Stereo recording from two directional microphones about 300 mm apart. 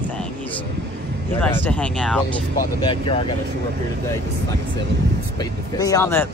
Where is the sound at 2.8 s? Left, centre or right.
Centre.